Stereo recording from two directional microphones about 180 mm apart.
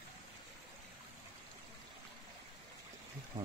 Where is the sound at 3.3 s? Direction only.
25° right (ahead or behind).